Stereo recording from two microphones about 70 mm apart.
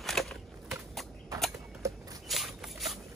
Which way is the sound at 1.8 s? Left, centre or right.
Right.